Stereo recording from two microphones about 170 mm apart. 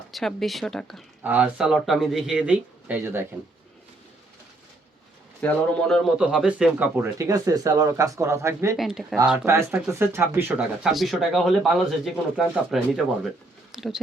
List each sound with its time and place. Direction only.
0.1 s speech: centre (ahead or behind)
5.4 s a man's voice: 10° left (ahead or behind); by 8.7 s 15° right (ahead or behind)
8.7 s speech: centre (ahead or behind)